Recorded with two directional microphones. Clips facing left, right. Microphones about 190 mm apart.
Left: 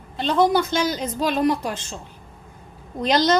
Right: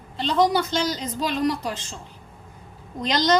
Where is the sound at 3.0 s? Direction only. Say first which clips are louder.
Left 2 dB; 45° left (ahead or behind).